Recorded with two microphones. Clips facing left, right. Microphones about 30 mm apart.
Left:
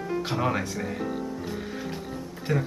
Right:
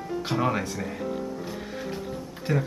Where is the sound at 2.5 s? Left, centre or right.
Centre.